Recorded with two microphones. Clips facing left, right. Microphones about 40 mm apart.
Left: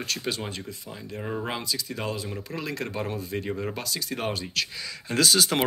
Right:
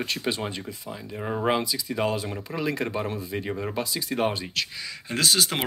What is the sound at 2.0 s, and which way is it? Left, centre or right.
Speech, right.